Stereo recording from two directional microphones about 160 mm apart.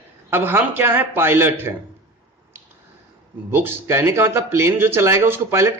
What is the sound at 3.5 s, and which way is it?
Speech, 15° right (ahead or behind).